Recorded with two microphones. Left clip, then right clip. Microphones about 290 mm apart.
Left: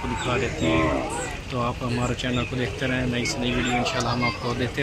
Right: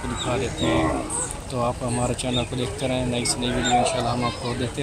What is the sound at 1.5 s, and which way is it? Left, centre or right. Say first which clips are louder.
Speech: right 3 dB; centre.